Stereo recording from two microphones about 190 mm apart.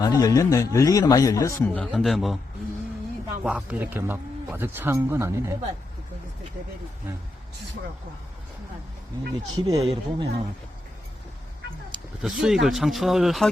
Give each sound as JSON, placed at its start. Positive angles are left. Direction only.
{"t": 0.0, "sound": "a man's voice", "side_deg": 20}
{"t": 3.4, "sound": "speech", "side_deg": -5}
{"t": 9.6, "sound": "speech", "side_deg": -25}
{"t": 12.2, "sound": "speech", "side_deg": -5}